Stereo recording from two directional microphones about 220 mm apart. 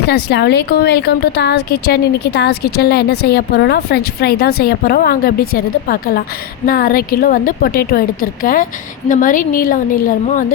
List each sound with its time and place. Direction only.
0.1 s a woman's voice: 50° left (ahead or behind)